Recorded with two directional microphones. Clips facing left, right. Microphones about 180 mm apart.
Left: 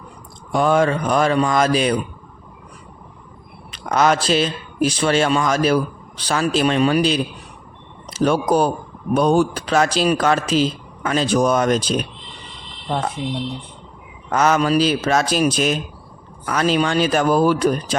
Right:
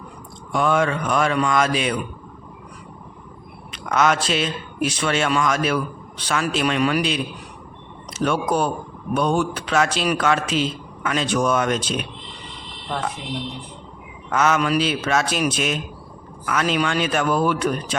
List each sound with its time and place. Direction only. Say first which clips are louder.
0.5 s speech: left 3 dB; 35° left (ahead or behind)
3.7 s speech: left 2 dB; 35° left (ahead or behind)
14.3 s speech: left 3 dB; 35° left (ahead or behind)